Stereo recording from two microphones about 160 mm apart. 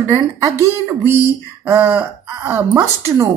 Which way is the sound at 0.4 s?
15° right (ahead or behind).